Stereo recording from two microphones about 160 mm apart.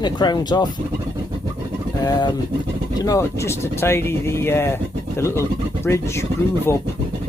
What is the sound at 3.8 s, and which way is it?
Speech, 15° left (ahead or behind).